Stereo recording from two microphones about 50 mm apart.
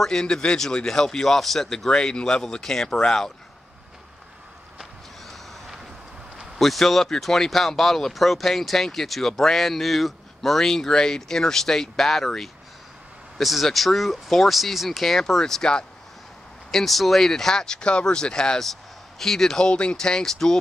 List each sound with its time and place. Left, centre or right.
0.0 s speech: centre
1.9 s speech: centre
6.6 s speech: centre
19.7 s speech: left